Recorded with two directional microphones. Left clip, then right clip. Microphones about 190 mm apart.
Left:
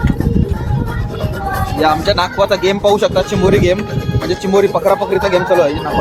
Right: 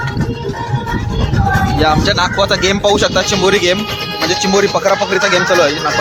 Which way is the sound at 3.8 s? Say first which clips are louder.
Right 3 dB; 50° left (ahead or behind).